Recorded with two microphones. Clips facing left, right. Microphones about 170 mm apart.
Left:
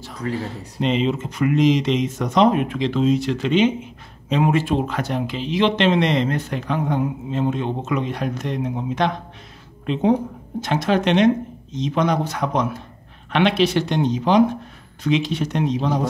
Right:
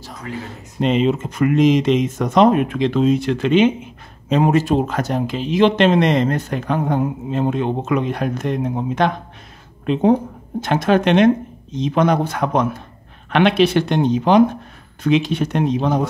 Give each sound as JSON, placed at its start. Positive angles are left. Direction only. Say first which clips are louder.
{"t": 0.2, "sound": "speech", "louder": "left 4 dB", "side_deg": 35}
{"t": 0.7, "sound": "speech", "louder": "right 4 dB", "side_deg": -50}
{"t": 4.3, "sound": "speech", "louder": "right 3 dB", "side_deg": -40}
{"t": 10.6, "sound": "speech", "louder": "right 4 dB", "side_deg": -55}